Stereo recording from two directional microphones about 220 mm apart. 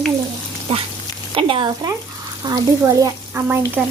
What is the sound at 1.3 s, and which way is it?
A woman's voice, 25° right (ahead or behind).